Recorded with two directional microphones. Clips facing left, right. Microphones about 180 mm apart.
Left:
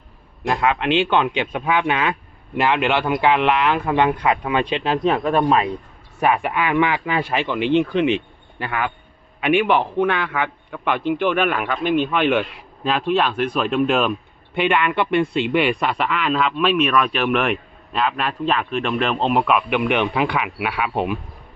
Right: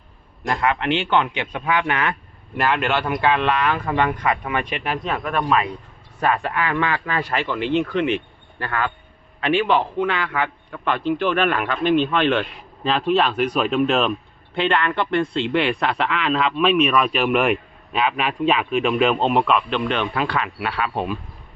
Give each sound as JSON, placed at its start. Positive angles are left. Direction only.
{"t": 0.4, "sound": "speech", "side_deg": 15}
{"t": 6.1, "sound": "a man's voice", "side_deg": 15}